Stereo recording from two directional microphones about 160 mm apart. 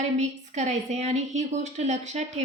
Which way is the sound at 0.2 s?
50° right (ahead or behind).